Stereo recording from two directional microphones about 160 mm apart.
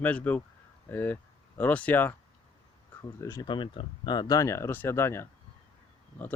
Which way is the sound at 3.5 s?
30° left (ahead or behind).